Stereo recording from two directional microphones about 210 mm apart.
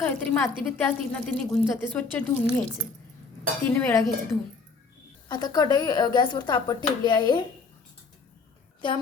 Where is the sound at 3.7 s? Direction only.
15° left (ahead or behind).